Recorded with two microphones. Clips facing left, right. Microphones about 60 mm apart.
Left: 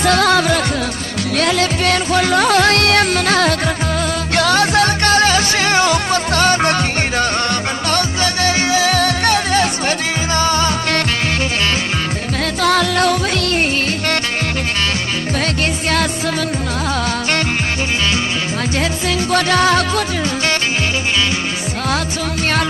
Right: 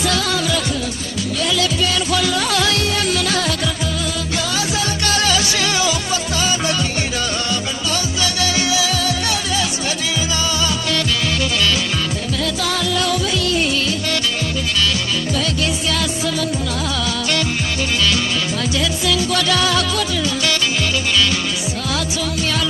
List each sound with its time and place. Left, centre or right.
0.0 s music: left
5.1 s music: left
8.2 s music: left
12.6 s music: left
18.8 s music: left